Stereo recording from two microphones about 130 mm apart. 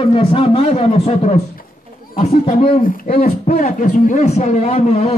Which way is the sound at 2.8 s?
90° left.